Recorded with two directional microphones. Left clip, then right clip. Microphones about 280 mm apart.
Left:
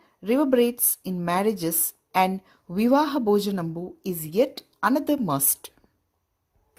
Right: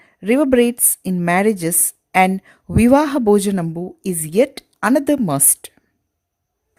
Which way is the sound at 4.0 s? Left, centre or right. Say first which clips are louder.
Right 7 dB; right.